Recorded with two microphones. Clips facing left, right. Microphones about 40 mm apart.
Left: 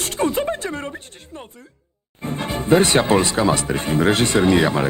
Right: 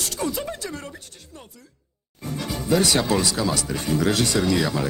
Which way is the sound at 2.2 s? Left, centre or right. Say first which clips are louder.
Left 4 dB; left.